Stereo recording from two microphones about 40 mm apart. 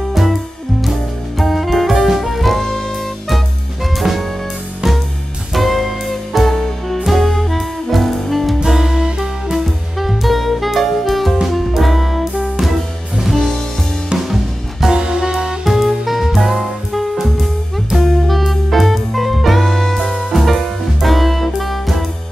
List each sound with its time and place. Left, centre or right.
0.1 s music: centre
5.5 s music: centre
8.6 s music: centre
9.9 s music: centre
15.0 s music: centre
15.6 s music: centre